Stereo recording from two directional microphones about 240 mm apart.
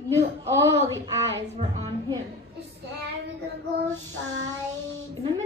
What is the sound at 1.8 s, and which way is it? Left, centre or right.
Speech, centre.